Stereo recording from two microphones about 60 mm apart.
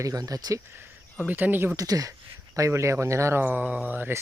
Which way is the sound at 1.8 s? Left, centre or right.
Right.